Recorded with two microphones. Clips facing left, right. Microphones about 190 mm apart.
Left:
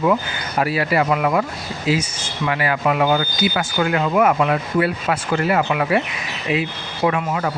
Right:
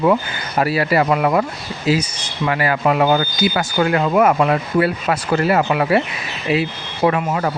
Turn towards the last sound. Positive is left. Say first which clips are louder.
# right 3 dB
turn(degrees=-40)  # may be behind; listen again after turning